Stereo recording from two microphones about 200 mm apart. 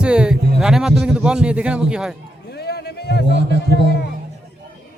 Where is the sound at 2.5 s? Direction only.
55° left (ahead or behind).